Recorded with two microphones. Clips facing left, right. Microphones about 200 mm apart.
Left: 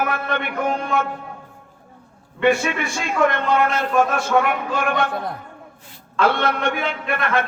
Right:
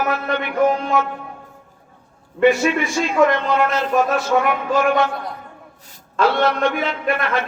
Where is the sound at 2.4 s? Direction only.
55° left (ahead or behind).